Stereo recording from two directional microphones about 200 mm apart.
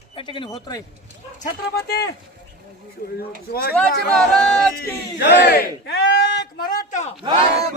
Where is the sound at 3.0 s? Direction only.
45° left (ahead or behind).